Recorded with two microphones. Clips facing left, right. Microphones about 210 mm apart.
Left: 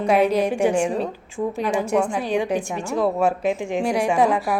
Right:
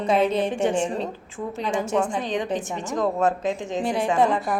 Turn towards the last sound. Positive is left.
turn(degrees=5)  # may be behind; listen again after turning